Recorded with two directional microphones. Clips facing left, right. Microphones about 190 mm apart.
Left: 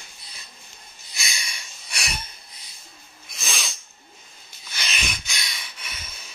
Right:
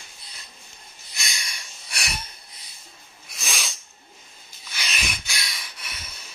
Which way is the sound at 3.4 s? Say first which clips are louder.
Even; 5° right (ahead or behind).